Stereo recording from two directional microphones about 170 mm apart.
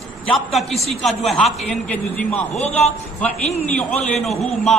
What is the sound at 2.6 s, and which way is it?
Speech, 40° left (ahead or behind).